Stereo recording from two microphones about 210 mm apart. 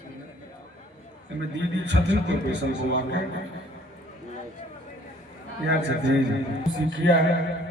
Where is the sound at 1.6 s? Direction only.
60° right (ahead or behind).